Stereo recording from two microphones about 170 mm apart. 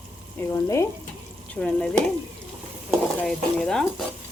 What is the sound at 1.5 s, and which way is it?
Speech, 5° left (ahead or behind).